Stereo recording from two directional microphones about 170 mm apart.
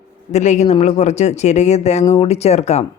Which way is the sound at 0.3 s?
45° left (ahead or behind).